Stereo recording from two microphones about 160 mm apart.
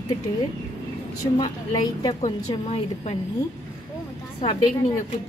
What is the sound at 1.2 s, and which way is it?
Speech, 25° left (ahead or behind).